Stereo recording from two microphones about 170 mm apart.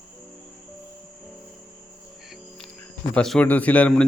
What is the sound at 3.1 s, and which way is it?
Speech, 5° left (ahead or behind).